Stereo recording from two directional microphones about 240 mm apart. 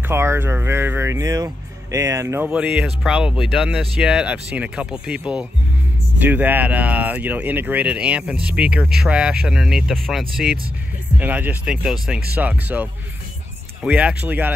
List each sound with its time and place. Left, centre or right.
0.1 s speech: centre
13.8 s speech: centre